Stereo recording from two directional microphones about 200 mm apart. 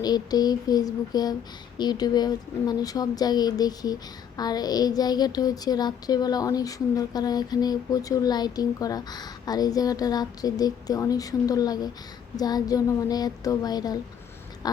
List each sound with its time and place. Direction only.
0.0 s a woman's voice: 20° left (ahead or behind)